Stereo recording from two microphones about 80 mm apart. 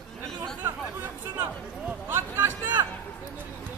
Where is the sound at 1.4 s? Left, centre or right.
Right.